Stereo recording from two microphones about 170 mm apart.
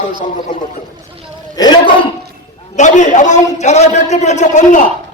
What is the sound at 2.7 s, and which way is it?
A man's voice, 45° left (ahead or behind).